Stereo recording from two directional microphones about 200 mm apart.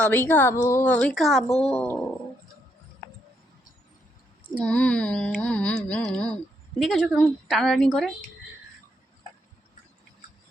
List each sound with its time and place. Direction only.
0.1 s a woman's voice: 10° left (ahead or behind)
1.5 s speech: 30° left (ahead or behind)
1.7 s a woman's voice: 10° left (ahead or behind)
4.6 s a sound: 5° left (ahead or behind)